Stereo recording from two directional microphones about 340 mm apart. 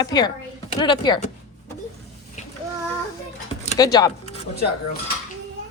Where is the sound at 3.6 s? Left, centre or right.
Centre.